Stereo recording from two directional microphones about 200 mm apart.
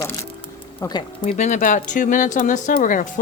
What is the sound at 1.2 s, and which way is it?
Speech, 40° left (ahead or behind).